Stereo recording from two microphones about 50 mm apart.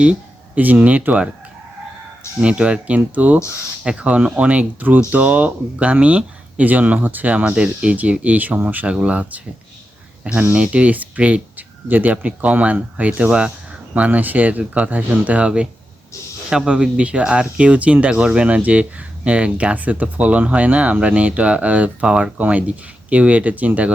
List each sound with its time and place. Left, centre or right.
0.0 s speech: right
2.4 s speech: right
7.5 s speech: centre; by 8.9 s right
8.9 s speech: right
10.5 s speech: right
11.5 s a sound: right
12.2 s speech: right
13.9 s speech: right